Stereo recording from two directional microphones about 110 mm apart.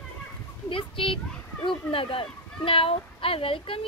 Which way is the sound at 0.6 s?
55° left (ahead or behind).